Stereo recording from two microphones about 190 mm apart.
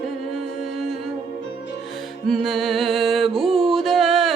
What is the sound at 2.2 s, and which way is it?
Music, centre (ahead or behind).